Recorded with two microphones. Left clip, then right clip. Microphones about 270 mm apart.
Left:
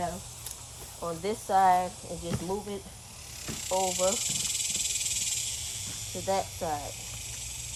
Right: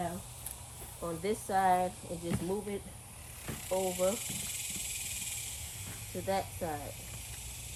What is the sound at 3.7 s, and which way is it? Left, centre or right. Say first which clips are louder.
Speech: left 4 dB; centre.